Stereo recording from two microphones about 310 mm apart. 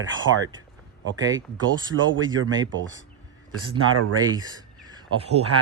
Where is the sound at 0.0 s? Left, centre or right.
Right.